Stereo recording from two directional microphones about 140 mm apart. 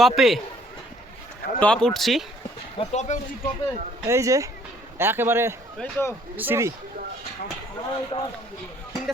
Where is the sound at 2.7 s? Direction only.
55° left (ahead or behind).